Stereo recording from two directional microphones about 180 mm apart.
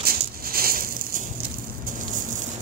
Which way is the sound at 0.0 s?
55° right (ahead or behind).